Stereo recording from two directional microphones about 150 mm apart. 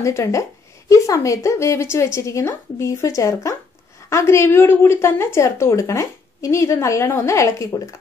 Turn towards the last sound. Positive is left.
turn(degrees=20)  # may be behind; listen again after turning